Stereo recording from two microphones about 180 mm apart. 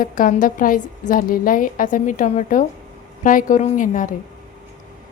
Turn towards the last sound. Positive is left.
turn(degrees=45)  # may be behind; listen again after turning